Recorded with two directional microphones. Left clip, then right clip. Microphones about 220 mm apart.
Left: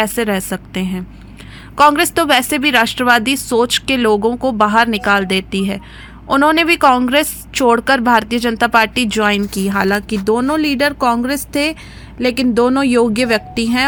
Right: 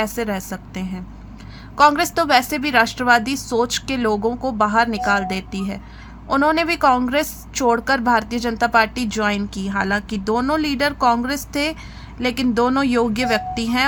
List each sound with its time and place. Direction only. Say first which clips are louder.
0.0 s a woman's voice: left 6 dB; 20° left (ahead or behind)